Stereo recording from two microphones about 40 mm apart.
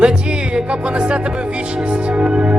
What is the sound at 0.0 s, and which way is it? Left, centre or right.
Music, right.